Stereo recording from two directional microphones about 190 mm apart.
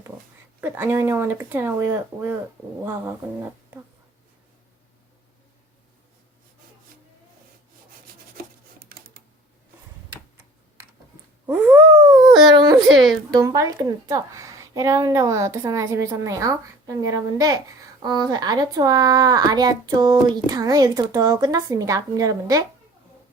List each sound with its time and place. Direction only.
0.6 s speech: 10° right (ahead or behind)
8.4 s a sound: 50° right (ahead or behind)
11.4 s speech: 10° right (ahead or behind)
12.1 s dog: 20° right (ahead or behind)
12.5 s a woman's voice: 20° right (ahead or behind)
12.8 s speech: centre (ahead or behind)
13.3 s a woman's voice: 20° right (ahead or behind)